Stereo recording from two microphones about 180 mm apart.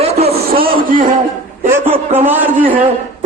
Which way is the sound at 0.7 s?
50° right (ahead or behind).